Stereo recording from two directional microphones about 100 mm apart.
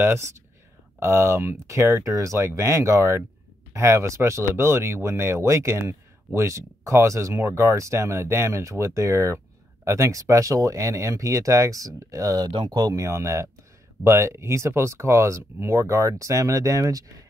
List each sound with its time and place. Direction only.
0.0 s speech: 25° right (ahead or behind)
13.0 s speech: 30° right (ahead or behind)